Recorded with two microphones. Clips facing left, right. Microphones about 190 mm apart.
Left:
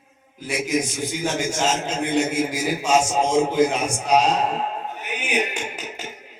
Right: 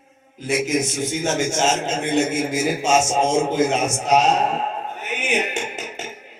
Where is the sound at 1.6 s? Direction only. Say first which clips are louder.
Right 2 dB; 25° right (ahead or behind).